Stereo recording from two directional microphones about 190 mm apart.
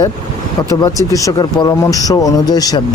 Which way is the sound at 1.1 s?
20° left (ahead or behind).